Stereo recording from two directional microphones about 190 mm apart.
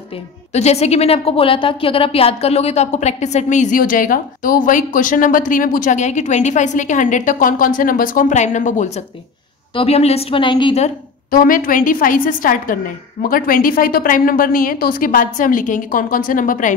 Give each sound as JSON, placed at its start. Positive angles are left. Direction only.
{"t": 0.5, "sound": "a woman's voice", "side_deg": 35}
{"t": 11.2, "sound": "a woman's voice", "side_deg": 50}